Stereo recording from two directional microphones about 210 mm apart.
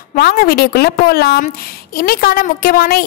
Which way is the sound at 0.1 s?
45° left (ahead or behind).